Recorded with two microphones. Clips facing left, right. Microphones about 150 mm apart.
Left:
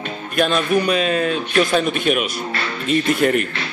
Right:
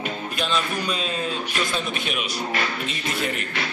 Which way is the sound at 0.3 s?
55° left (ahead or behind).